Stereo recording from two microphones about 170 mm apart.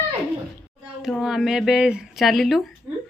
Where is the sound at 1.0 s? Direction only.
Centre (ahead or behind).